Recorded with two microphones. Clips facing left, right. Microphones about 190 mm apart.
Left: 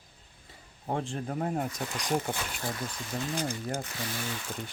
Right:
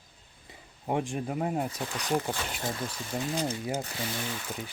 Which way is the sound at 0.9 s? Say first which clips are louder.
Right 2 dB; 15° right (ahead or behind).